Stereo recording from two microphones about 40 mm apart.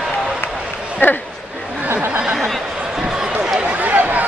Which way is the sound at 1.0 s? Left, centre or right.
Left.